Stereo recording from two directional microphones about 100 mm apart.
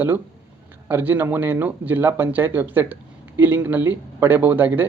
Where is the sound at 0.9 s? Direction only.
20° right (ahead or behind).